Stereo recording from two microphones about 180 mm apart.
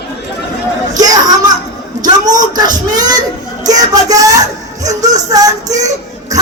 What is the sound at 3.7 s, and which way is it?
Music, 20° right (ahead or behind).